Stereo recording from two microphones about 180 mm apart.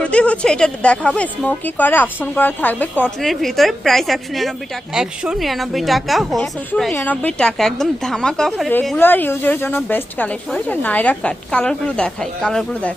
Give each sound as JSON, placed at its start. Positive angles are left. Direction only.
{"t": 0.0, "sound": "a woman's voice", "side_deg": 5}